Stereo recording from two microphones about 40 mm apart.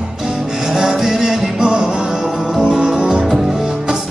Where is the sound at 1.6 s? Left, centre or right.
Right.